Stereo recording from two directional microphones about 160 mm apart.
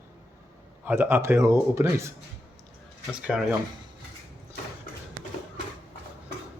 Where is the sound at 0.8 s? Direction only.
15° right (ahead or behind).